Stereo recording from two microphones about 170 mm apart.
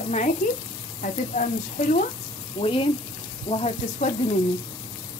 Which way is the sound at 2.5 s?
35° left (ahead or behind).